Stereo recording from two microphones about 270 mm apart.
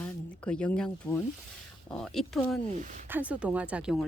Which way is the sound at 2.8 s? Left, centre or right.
Right.